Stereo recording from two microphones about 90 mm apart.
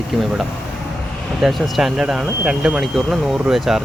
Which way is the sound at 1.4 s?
Centre (ahead or behind).